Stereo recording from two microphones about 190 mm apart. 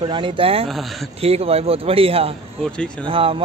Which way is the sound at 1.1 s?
30° right (ahead or behind).